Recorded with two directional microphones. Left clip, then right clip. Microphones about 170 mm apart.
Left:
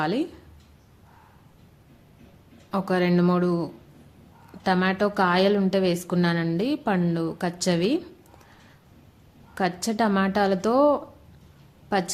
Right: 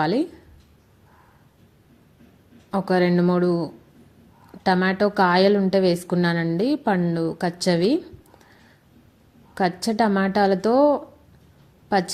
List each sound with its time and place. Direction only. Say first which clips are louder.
0.0 s a woman's voice: right 4 dB; 15° right (ahead or behind)
2.6 s a woman's voice: right 3 dB; 15° right (ahead or behind)
9.6 s a woman's voice: right 3 dB; 15° right (ahead or behind)